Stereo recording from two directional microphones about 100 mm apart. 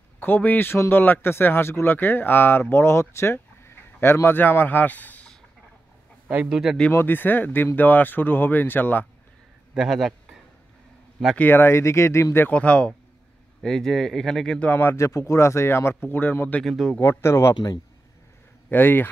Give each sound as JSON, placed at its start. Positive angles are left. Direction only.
{"t": 0.2, "sound": "speech", "side_deg": 20}
{"t": 6.2, "sound": "a man's voice", "side_deg": -15}
{"t": 6.9, "sound": "speech", "side_deg": 20}
{"t": 9.8, "sound": "speech", "side_deg": 0}
{"t": 11.3, "sound": "speech", "side_deg": 20}
{"t": 12.4, "sound": "speech", "side_deg": 15}
{"t": 16.6, "sound": "speech", "side_deg": 0}
{"t": 17.0, "sound": "speech", "side_deg": 25}
{"t": 18.7, "sound": "speech", "side_deg": 20}